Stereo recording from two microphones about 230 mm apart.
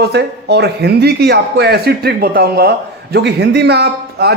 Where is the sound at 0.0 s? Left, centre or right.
Right.